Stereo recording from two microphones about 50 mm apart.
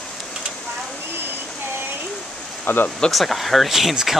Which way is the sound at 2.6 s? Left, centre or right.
Left.